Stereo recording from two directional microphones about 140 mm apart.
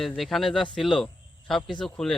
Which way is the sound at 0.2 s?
Centre (ahead or behind).